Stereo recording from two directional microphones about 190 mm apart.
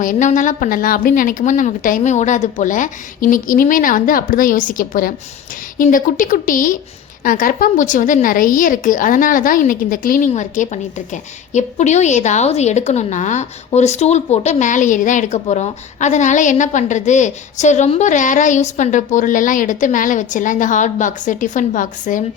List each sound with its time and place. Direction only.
0.0 s a woman's voice: 40° left (ahead or behind)